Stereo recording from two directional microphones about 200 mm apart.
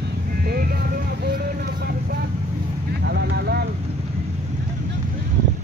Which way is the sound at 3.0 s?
55° right (ahead or behind).